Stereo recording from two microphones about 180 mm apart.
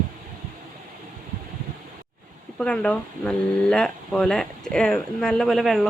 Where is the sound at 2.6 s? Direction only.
5° left (ahead or behind).